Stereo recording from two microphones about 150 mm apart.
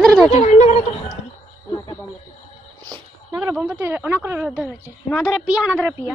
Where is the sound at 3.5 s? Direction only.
5° right (ahead or behind).